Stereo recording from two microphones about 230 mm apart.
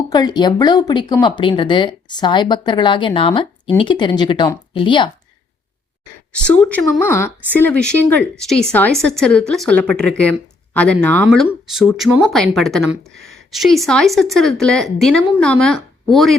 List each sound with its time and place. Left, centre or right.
0.1 s speech: centre
6.3 s speech: centre